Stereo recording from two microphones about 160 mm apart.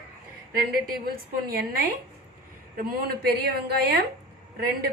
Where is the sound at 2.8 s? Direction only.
75° right (ahead or behind).